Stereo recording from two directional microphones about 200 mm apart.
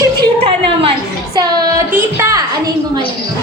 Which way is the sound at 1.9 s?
10° right (ahead or behind).